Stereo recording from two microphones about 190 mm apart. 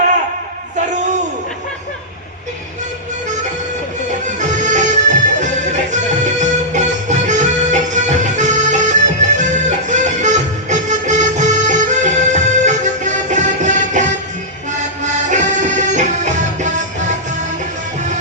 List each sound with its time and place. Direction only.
4.4 s music: 40° right (ahead or behind)